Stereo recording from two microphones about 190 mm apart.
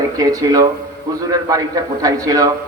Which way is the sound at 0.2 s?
20° right (ahead or behind).